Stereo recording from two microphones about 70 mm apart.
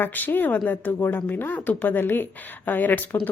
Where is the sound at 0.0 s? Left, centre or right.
Left.